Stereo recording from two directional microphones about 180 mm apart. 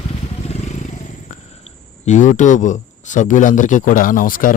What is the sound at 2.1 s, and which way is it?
Speech, 45° left (ahead or behind).